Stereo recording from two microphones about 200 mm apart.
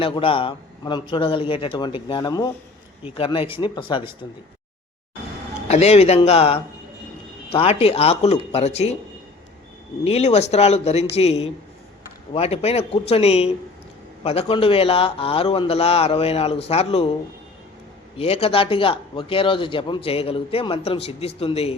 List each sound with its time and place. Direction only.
0.0 s speech: 25° left (ahead or behind)
5.6 s speech: 30° left (ahead or behind)
10.0 s speech: 30° left (ahead or behind)
18.2 s speech: 30° left (ahead or behind)